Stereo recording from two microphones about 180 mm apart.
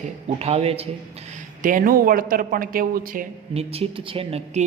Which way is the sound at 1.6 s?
50° right (ahead or behind).